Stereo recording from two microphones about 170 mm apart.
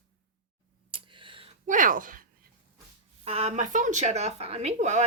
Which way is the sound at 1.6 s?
50° right (ahead or behind).